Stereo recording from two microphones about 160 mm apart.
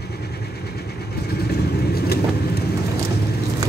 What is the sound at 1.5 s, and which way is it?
Vehicle, 80° left.